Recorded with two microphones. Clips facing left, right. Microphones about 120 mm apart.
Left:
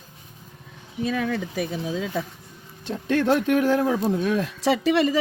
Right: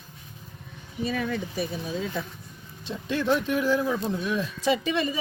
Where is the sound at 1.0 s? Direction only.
90° left.